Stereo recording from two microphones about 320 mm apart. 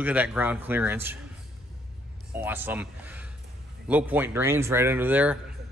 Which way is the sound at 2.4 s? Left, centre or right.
Centre.